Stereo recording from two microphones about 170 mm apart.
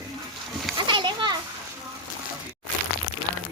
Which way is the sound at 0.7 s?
30° right (ahead or behind).